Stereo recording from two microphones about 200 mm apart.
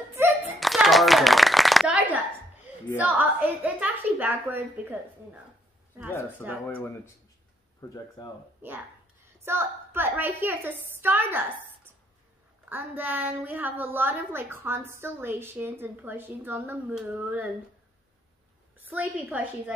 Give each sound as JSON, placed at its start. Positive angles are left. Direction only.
{"t": 0.1, "sound": "hands", "side_deg": -10}
{"t": 0.6, "sound": "shuffling cards", "side_deg": 0}
{"t": 3.0, "sound": "a woman's voice", "side_deg": -10}
{"t": 6.4, "sound": "a woman's voice", "side_deg": -10}
{"t": 7.8, "sound": "speech", "side_deg": 15}
{"t": 8.6, "sound": "a woman's voice", "side_deg": -10}
{"t": 18.8, "sound": "a woman's voice", "side_deg": -10}